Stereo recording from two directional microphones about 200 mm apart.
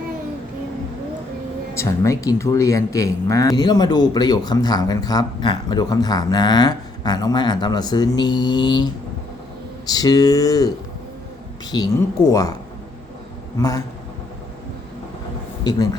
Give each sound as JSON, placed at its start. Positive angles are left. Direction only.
{"t": 1.7, "sound": "speech", "side_deg": 15}
{"t": 11.7, "sound": "speech", "side_deg": 20}
{"t": 13.6, "sound": "speech", "side_deg": 15}